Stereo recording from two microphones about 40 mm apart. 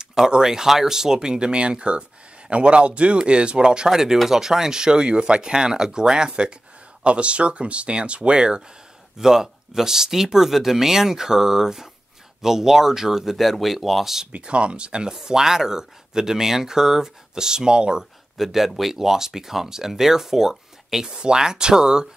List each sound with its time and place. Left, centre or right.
0.0 s a sound: centre
0.3 s speech: centre
9.2 s speech: centre
14.2 s speech: right
18.4 s speech: centre